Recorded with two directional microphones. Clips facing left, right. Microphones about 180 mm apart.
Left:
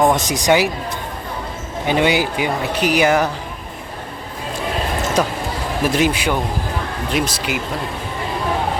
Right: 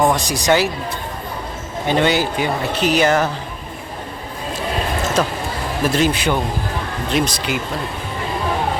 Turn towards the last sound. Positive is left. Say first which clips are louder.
# right 1 dB
turn(degrees=5)  # may be behind; listen again after turning